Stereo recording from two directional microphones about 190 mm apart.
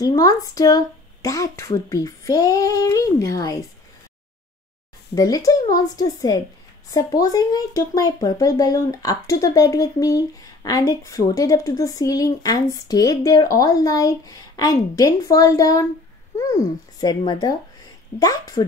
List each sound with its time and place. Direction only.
0.0 s speech: 20° left (ahead or behind)
5.1 s speech: 20° left (ahead or behind)